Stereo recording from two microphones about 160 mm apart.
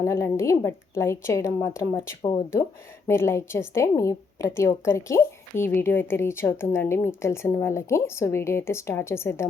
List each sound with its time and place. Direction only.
0.0 s a woman's voice: 15° left (ahead or behind)
3.1 s a woman's voice: 15° left (ahead or behind)